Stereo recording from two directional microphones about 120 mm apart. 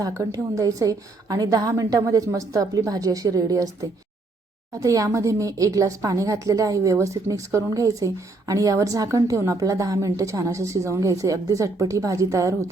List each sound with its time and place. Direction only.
0.0 s speech: 30° right (ahead or behind)